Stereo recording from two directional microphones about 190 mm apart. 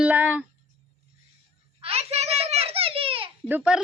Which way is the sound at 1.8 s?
35° right (ahead or behind).